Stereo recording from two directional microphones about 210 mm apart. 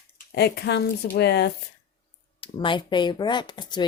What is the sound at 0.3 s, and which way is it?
Speech, 50° left (ahead or behind).